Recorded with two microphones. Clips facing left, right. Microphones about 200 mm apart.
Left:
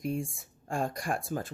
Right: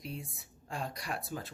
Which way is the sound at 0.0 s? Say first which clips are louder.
Left 10 dB; 50° left (ahead or behind).